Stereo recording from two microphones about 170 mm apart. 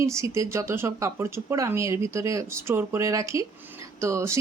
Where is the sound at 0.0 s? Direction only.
15° right (ahead or behind).